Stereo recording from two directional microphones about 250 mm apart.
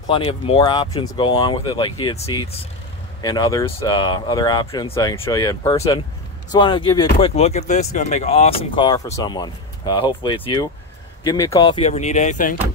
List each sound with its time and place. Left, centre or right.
0.1 s speech: centre